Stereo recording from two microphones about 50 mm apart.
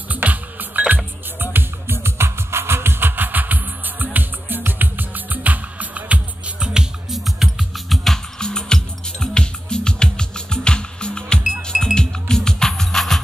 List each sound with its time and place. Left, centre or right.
0.1 s music: right; by 7.2 s centre
7.2 s music: centre
8.4 s music: centre